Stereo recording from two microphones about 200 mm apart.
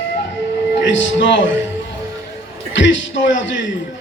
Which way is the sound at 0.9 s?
65° left (ahead or behind).